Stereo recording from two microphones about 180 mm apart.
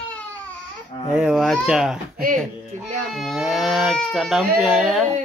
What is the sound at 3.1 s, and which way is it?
Speech, centre (ahead or behind).